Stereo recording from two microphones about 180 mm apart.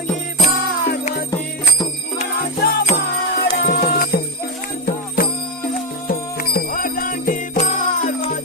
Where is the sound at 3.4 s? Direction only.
65° left (ahead or behind).